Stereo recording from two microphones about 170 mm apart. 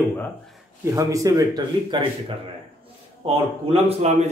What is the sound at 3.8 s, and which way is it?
Speech, 40° right (ahead or behind).